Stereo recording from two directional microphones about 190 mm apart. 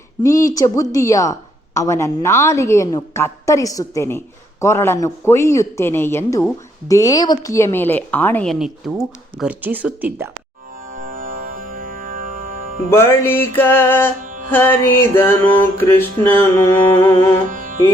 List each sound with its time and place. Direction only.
0.2 s speech: 15° left (ahead or behind); by 10.2 s 10° right (ahead or behind)
10.9 s music: 45° right (ahead or behind)
12.9 s speech: 15° left (ahead or behind)
17.5 s music: 45° right (ahead or behind)